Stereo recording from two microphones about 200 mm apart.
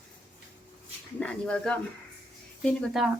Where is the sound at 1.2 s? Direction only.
5° left (ahead or behind).